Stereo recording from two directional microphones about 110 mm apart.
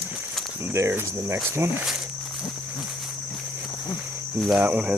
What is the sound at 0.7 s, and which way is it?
Speech, 25° right (ahead or behind).